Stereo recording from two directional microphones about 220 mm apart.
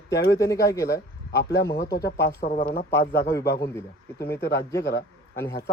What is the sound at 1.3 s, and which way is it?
A man's voice, 50° left (ahead or behind).